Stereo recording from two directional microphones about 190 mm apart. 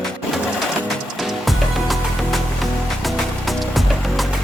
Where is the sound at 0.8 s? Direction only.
Centre (ahead or behind).